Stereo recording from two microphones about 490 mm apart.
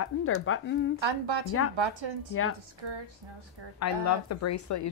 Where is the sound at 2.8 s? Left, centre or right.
Right.